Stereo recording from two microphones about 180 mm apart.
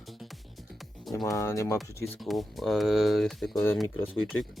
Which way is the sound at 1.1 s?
15° left (ahead or behind).